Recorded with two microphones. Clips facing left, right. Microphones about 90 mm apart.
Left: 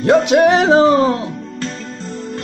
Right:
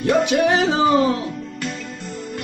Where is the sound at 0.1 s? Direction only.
80° left.